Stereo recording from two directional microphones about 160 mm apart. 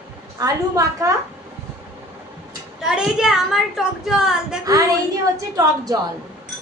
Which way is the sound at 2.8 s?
5° right (ahead or behind).